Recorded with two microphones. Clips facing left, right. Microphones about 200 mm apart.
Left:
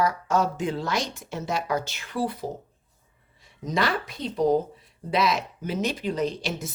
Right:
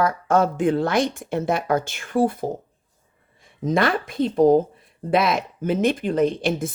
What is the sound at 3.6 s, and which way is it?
A woman's voice, 55° right (ahead or behind).